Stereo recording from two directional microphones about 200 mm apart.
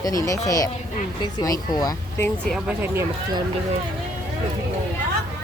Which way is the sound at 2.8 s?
15° right (ahead or behind).